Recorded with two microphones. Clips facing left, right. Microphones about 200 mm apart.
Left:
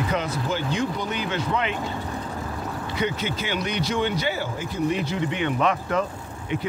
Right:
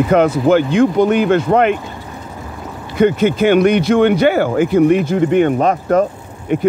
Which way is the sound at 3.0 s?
55° right (ahead or behind).